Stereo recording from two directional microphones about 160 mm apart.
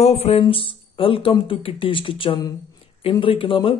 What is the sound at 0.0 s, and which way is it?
Speech, 40° left (ahead or behind).